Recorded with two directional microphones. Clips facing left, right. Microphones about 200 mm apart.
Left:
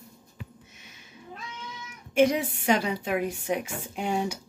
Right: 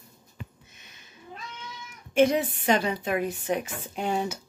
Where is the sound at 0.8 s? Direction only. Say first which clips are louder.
Left 3 dB; 10° left (ahead or behind).